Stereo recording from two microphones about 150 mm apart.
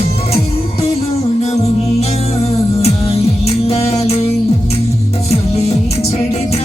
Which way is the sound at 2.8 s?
45° left (ahead or behind).